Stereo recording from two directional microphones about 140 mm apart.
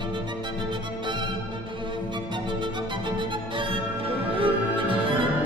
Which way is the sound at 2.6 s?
35° right (ahead or behind).